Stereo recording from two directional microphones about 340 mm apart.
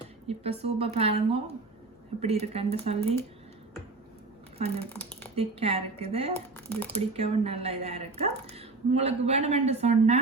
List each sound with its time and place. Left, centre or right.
0.3 s speech: centre
4.5 s a woman's voice: centre
6.7 s speech: centre
7.1 s a woman's voice: centre